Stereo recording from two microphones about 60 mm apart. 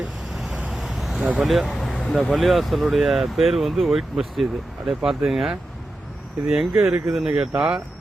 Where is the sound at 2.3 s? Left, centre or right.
Centre.